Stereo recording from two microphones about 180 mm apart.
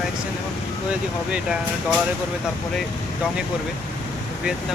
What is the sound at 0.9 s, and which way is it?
Speech, 5° right (ahead or behind).